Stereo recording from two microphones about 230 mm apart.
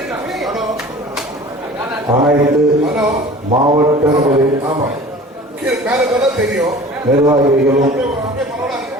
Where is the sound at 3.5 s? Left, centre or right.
Right.